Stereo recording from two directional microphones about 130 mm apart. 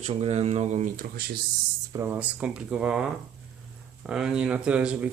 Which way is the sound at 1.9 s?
25° right (ahead or behind).